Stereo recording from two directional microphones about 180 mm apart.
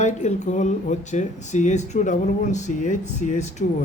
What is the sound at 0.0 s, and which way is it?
Speech, 40° left (ahead or behind).